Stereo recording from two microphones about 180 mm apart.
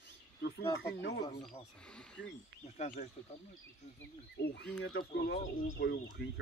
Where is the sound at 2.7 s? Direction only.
40° left (ahead or behind).